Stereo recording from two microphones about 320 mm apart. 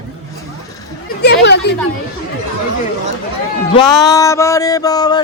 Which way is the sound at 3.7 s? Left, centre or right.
Centre.